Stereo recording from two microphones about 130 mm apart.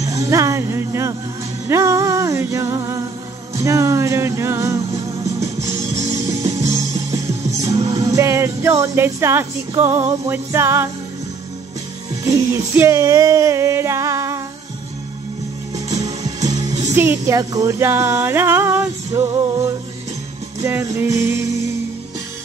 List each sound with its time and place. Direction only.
0.0 s music: 25° right (ahead or behind)
4.9 s music: 60° right (ahead or behind)
7.9 s music: 25° right (ahead or behind)
12.3 s music: 25° right (ahead or behind)
16.0 s music: 30° right (ahead or behind)
16.9 s speech: 15° right (ahead or behind)
17.4 s music: 25° right (ahead or behind)